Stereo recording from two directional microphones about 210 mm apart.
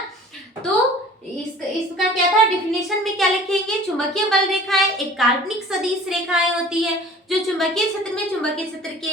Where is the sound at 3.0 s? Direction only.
Centre (ahead or behind).